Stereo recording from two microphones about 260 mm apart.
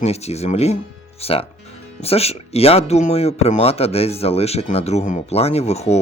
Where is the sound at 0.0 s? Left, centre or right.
Left.